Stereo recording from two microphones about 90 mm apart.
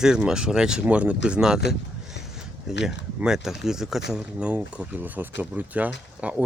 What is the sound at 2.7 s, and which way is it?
Speech, 5° right (ahead or behind).